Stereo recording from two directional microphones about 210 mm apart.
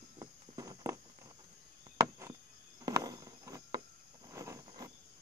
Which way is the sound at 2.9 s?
15° right (ahead or behind).